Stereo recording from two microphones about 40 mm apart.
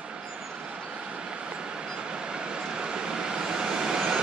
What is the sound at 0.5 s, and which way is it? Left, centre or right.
Vehicle, right.